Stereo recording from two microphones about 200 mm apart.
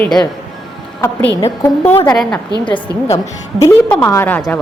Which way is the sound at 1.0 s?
15° left (ahead or behind).